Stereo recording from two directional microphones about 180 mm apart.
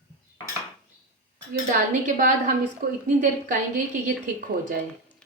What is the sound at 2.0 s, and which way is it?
A woman's voice, 45° right (ahead or behind).